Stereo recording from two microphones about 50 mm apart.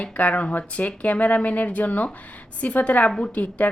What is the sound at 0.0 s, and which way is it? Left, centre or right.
A woman's voice, left.